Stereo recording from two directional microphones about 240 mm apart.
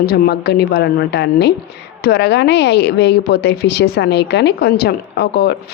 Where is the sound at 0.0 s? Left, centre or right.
Left.